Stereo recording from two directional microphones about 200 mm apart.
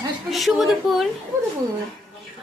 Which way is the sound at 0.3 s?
Centre (ahead or behind).